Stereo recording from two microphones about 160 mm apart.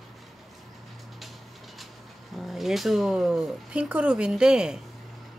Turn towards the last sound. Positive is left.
turn(degrees=-5)  # may be behind; listen again after turning